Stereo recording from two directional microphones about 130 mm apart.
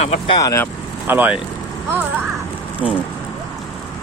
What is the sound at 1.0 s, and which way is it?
Speech, 15° right (ahead or behind).